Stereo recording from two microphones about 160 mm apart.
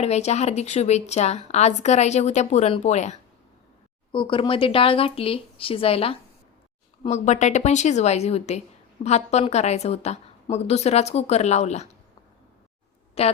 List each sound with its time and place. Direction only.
0.0 s a woman's voice: 45° left (ahead or behind)
4.1 s speech: 30° left (ahead or behind)
7.1 s a woman's voice: 45° left (ahead or behind)
13.2 s speech: 40° left (ahead or behind)